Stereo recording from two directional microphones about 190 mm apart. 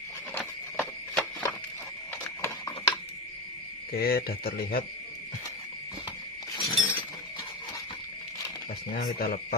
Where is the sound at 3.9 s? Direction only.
55° left (ahead or behind).